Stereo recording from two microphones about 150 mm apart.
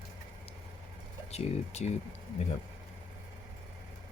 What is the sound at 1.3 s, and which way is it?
Speech, 45° left (ahead or behind).